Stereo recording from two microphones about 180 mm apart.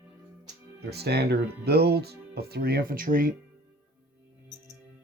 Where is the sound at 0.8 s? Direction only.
65° right (ahead or behind).